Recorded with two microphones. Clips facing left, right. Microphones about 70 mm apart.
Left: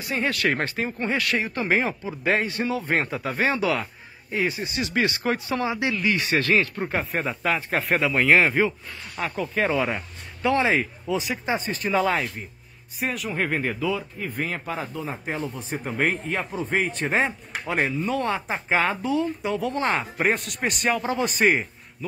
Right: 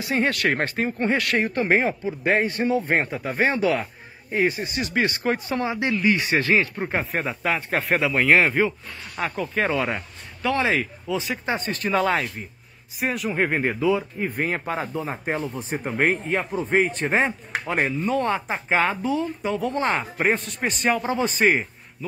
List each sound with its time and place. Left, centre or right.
0.2 s speech: right; by 7.1 s centre
7.1 s speech: centre
10.5 s speech: left
11.4 s speech: centre
13.4 s speech: centre
15.7 s speech: centre
20.8 s speech: centre